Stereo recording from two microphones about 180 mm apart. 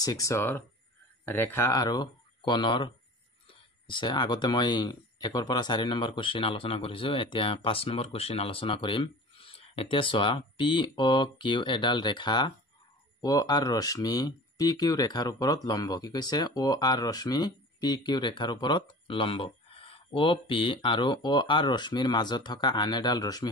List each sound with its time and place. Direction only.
0.0 s speech: 20° left (ahead or behind)